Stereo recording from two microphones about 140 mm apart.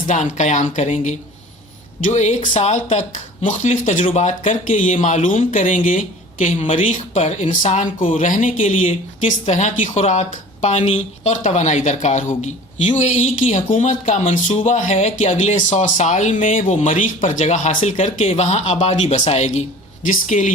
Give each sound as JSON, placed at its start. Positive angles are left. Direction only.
{"t": 0.1, "sound": "speech", "side_deg": 60}
{"t": 20.1, "sound": "speech", "side_deg": 65}